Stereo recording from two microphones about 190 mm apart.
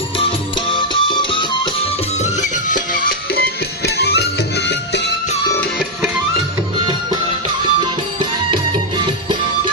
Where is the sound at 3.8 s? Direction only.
60° left (ahead or behind).